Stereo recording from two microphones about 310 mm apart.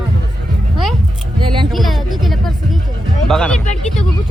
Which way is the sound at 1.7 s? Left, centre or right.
Centre.